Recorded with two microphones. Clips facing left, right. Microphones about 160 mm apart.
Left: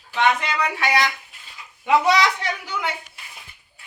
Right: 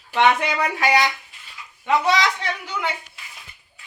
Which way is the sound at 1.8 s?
10° left (ahead or behind).